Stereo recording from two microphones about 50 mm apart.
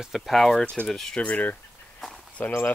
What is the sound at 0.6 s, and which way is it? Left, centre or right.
Speech, left.